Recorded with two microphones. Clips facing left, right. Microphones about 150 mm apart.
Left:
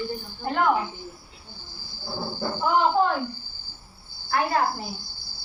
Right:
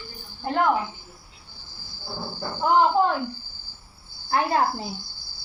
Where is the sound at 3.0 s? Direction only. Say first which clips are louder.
Right 1 dB; 20° right (ahead or behind).